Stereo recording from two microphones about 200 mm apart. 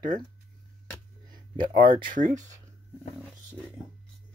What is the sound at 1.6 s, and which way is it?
Speech, 40° right (ahead or behind).